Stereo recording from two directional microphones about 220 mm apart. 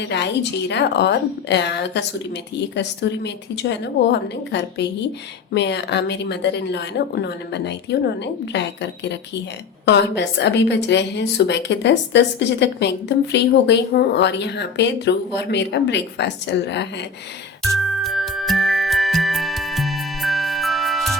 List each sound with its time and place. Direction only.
0.0 s a woman's voice: 50° left (ahead or behind)
17.6 s music: centre (ahead or behind)